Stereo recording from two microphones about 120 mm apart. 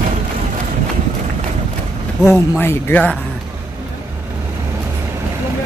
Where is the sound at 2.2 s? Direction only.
20° left (ahead or behind).